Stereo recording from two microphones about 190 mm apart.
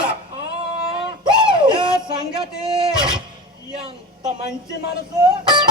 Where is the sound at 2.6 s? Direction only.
25° right (ahead or behind).